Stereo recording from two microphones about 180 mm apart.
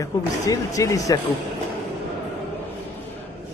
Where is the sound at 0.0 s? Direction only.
20° left (ahead or behind).